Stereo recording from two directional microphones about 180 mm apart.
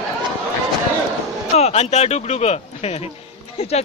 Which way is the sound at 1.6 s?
35° left (ahead or behind).